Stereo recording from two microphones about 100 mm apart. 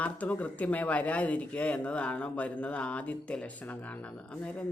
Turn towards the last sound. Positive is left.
turn(degrees=10)  # may be behind; listen again after turning